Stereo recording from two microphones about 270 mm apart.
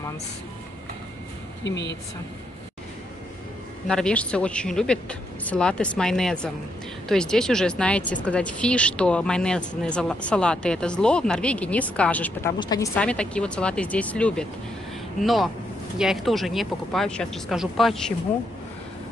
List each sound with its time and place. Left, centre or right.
1.6 s a woman's voice: left
3.8 s speech: centre